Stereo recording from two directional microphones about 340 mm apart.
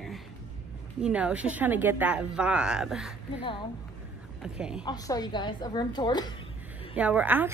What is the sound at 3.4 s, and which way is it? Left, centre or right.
Speech, centre.